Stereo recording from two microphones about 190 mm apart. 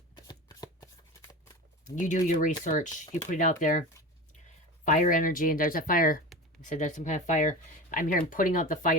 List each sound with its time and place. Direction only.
0.3 s shuffling cards: 20° left (ahead or behind)
2.0 s speech: 40° left (ahead or behind)